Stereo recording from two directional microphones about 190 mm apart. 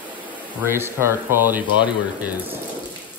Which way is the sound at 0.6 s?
10° right (ahead or behind).